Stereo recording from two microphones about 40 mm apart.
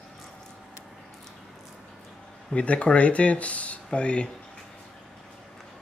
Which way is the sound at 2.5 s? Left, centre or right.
Left.